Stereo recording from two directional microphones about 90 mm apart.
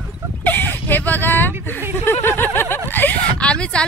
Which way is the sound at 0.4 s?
20° left (ahead or behind).